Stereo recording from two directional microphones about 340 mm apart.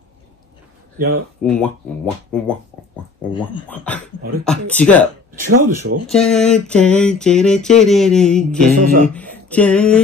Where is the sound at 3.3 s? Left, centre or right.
Centre.